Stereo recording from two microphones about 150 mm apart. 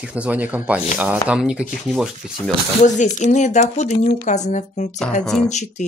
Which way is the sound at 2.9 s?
55° left (ahead or behind).